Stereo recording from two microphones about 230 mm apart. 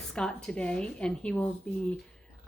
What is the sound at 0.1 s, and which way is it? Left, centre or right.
Speech, centre.